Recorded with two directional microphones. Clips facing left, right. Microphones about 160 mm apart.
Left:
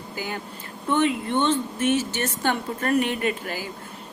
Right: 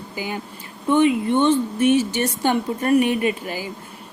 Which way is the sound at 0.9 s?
10° right (ahead or behind).